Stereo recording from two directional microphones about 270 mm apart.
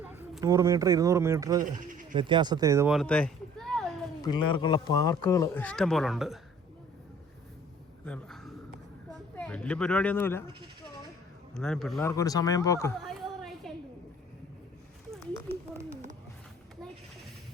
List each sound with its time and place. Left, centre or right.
0.0 s speech: centre
1.9 s bleat: right
2.1 s speech: centre
4.2 s speech: centre
8.0 s a sound: centre
9.3 s speech: centre
11.5 s a man's voice: centre
12.1 s speech: centre
13.0 s a sound: centre